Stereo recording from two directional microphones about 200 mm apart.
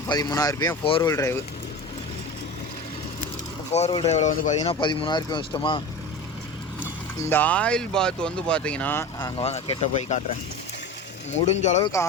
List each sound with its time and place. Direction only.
0.1 s speech: 20° left (ahead or behind)
3.7 s speech: 35° left (ahead or behind)
4.6 s speech: 25° left (ahead or behind)
7.2 s speech: 10° left (ahead or behind)
9.1 s speech: 25° left (ahead or behind)
11.3 s speech: 35° left (ahead or behind)
11.8 s speech: 15° left (ahead or behind)